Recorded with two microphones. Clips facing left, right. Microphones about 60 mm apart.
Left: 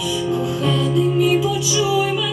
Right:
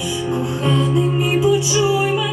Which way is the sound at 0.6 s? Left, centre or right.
Right.